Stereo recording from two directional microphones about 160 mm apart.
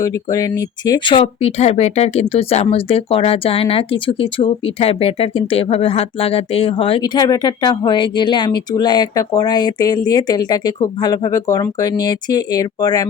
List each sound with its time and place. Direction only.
0.0 s speech: 20° left (ahead or behind); by 7.0 s 35° left (ahead or behind)
7.0 s speech: 25° left (ahead or behind)